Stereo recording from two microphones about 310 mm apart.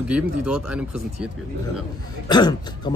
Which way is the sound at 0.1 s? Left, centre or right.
Centre.